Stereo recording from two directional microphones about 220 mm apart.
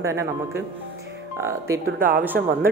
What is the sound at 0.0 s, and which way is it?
Speech, 10° right (ahead or behind).